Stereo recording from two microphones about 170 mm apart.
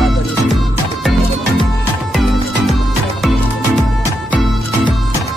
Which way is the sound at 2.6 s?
Centre (ahead or behind).